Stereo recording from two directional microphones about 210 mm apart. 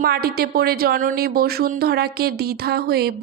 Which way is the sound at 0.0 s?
45° right (ahead or behind).